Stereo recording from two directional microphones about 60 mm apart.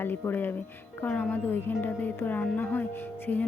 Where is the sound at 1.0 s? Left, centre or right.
Left.